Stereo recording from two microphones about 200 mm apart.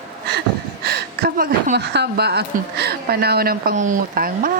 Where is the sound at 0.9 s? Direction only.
50° right (ahead or behind).